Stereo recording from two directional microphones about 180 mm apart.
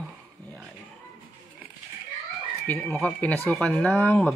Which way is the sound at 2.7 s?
10° left (ahead or behind).